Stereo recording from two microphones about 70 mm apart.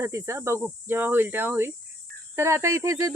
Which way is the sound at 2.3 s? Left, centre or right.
Right.